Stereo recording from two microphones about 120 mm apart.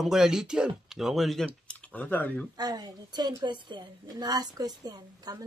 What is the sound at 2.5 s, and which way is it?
A woman's voice, 35° right (ahead or behind).